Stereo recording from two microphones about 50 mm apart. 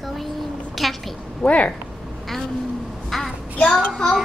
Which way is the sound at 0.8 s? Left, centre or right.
Centre.